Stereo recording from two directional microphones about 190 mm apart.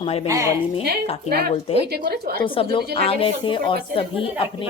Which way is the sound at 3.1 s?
30° left (ahead or behind).